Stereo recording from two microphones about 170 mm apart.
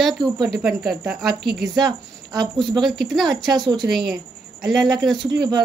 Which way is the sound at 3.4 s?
25° right (ahead or behind).